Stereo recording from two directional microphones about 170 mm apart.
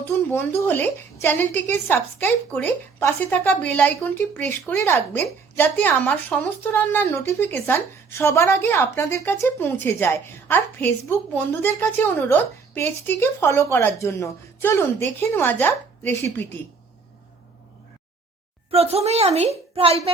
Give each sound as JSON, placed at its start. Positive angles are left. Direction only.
{"t": 0.0, "sound": "speech", "side_deg": 10}
{"t": 18.7, "sound": "a woman's voice", "side_deg": -35}